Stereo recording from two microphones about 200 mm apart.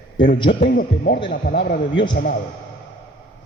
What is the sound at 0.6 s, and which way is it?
A man's voice, 55° left (ahead or behind).